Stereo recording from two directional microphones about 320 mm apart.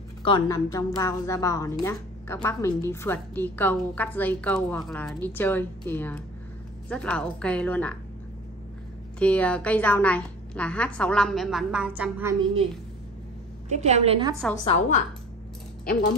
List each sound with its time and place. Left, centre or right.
0.2 s a woman's voice: centre
9.2 s a woman's voice: centre
13.7 s a woman's voice: right
14.5 s a woman's voice: centre